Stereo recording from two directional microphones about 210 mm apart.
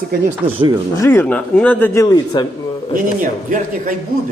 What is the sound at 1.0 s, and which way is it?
A man's voice, 10° left (ahead or behind).